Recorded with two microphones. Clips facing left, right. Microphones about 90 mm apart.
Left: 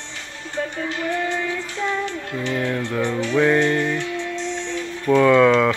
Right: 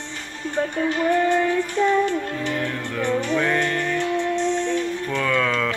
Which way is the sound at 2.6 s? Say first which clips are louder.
Left 3 dB; 15° left (ahead or behind).